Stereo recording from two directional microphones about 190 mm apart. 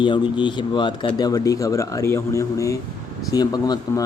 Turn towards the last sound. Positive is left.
turn(degrees=20)  # may be behind; listen again after turning